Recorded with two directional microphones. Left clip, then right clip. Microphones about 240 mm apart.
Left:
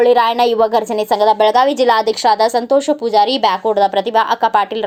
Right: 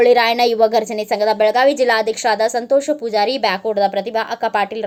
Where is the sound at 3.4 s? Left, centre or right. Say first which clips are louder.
Left 4 dB; left.